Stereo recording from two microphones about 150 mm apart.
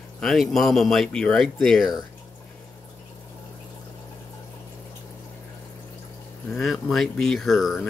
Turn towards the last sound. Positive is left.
turn(degrees=0)  # may be behind; listen again after turning